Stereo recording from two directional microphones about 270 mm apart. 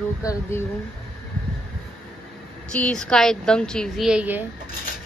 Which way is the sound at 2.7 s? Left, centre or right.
Centre.